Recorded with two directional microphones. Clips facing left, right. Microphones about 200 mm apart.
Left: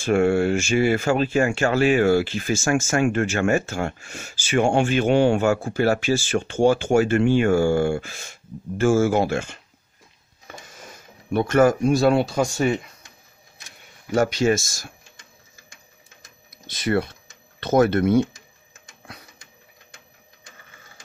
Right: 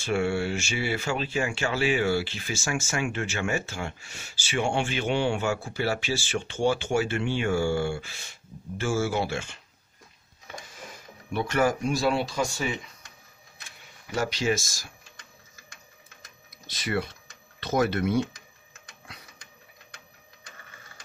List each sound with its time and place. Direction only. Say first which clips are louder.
0.0 s speech: left 8 dB; 50° left (ahead or behind)
11.3 s speech: left 8 dB; 45° left (ahead or behind)
13.7 s camera: left 11 dB; 50° left (ahead or behind)
16.7 s speech: left 7 dB; 50° left (ahead or behind)